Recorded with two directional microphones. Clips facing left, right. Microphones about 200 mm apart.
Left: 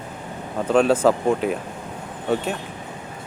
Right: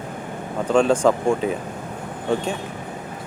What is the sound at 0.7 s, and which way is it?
Speech, 5° left (ahead or behind).